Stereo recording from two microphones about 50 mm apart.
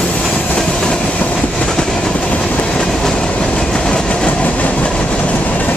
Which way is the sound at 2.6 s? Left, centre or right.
Centre.